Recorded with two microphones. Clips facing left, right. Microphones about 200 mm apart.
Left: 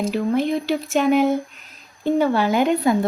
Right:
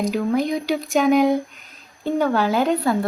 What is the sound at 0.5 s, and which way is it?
A woman's voice, centre (ahead or behind).